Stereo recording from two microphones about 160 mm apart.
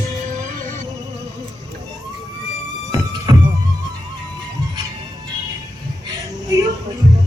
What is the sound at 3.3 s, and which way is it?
Music, 25° right (ahead or behind).